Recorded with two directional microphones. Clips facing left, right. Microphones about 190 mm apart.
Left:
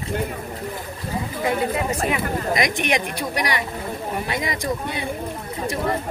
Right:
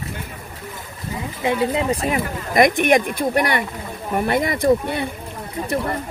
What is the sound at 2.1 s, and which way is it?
Speech, 55° right (ahead or behind).